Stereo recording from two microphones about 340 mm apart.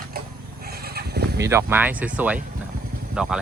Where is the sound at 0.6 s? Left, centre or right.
Right.